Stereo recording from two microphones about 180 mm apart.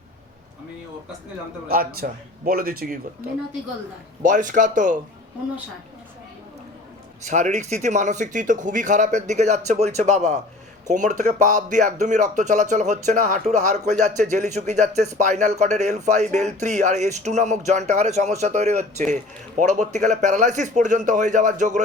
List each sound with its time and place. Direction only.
1.6 s a man's voice: 55° right (ahead or behind)
4.2 s speech: 45° right (ahead or behind)
7.3 s a man's voice: 40° right (ahead or behind)